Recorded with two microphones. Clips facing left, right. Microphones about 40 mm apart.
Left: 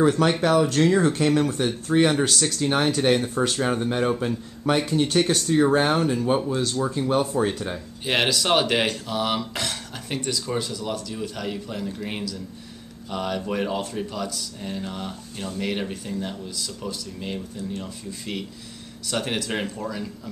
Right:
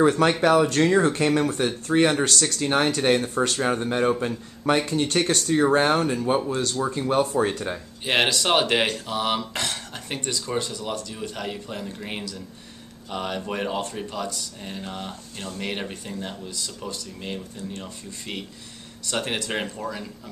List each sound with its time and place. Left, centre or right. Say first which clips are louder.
0.0 s speech: right 1 dB; centre